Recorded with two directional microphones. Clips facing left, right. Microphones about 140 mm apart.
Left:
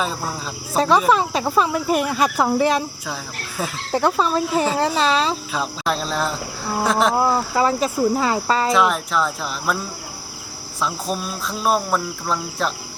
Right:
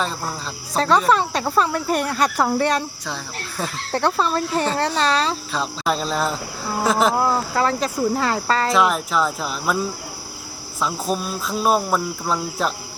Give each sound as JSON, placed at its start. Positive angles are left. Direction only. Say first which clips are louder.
{"t": 0.0, "sound": "speech", "louder": "left 1 dB", "side_deg": 5}
{"t": 10.8, "sound": "speech", "louder": "right 1 dB", "side_deg": 0}